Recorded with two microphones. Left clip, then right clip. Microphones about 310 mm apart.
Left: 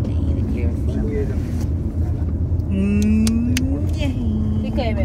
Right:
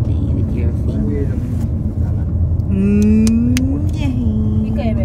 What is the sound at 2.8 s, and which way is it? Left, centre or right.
Vehicle, centre.